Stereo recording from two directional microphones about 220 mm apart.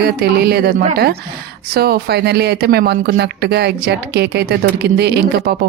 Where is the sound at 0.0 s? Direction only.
45° right (ahead or behind).